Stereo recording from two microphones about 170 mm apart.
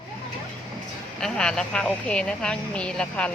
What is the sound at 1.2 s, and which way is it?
Speech, 5° left (ahead or behind).